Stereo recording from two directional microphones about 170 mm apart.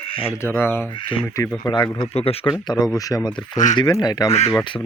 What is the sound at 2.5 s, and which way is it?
Speech, 25° left (ahead or behind).